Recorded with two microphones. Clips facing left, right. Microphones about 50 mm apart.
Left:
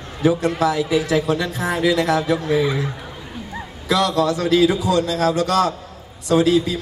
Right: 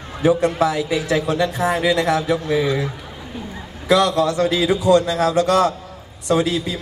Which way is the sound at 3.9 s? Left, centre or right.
Right.